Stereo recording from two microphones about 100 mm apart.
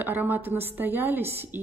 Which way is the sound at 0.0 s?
20° right (ahead or behind).